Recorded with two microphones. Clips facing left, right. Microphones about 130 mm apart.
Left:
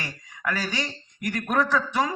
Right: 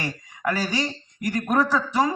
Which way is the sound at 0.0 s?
40° right (ahead or behind).